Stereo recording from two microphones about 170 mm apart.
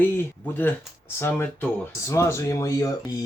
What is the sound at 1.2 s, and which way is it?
Speech, 10° left (ahead or behind).